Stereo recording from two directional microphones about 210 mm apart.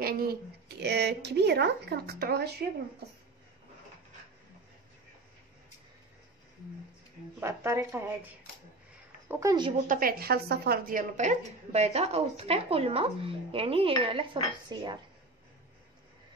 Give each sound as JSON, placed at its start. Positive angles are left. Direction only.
{"t": 0.0, "sound": "a woman's voice", "side_deg": -45}
{"t": 7.3, "sound": "speech", "side_deg": -10}
{"t": 9.3, "sound": "speech", "side_deg": -15}
{"t": 9.8, "sound": "a woman's voice", "side_deg": -45}